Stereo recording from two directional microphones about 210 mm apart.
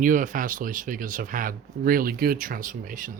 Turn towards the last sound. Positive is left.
turn(degrees=-40)  # may be behind; listen again after turning